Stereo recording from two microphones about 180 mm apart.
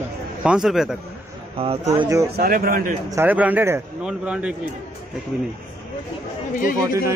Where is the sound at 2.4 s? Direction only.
55° right (ahead or behind).